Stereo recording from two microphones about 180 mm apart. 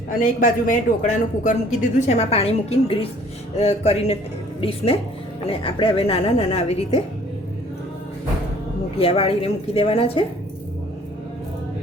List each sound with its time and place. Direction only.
0.2 s a woman's voice: 50° left (ahead or behind)
9.0 s a woman's voice: 30° left (ahead or behind)